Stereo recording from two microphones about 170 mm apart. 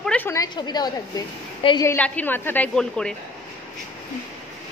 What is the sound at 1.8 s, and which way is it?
A woman's voice, 10° left (ahead or behind).